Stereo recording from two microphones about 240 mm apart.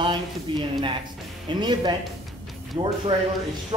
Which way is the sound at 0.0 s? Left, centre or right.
Centre.